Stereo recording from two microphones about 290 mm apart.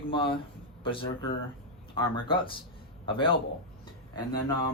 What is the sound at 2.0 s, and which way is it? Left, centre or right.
Speech, centre.